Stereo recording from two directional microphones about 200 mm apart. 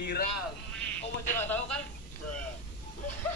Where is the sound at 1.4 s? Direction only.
10° left (ahead or behind).